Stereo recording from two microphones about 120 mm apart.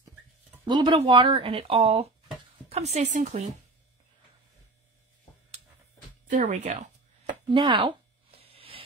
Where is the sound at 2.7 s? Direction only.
65° right (ahead or behind); by 3.4 s 85° right.